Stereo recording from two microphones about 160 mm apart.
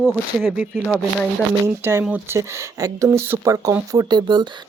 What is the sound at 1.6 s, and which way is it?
Speech, 15° right (ahead or behind).